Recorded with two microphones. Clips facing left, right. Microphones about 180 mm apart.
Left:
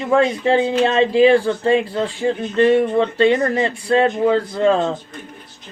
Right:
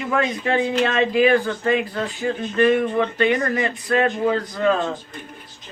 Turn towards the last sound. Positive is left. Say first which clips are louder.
# left 4 dB
turn(degrees=25)  # may be behind; listen again after turning